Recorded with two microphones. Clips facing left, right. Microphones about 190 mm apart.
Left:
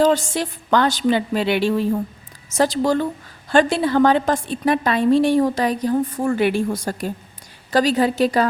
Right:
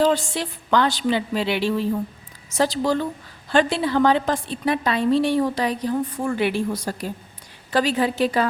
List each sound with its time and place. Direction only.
0.0 s a woman's voice: 45° left (ahead or behind)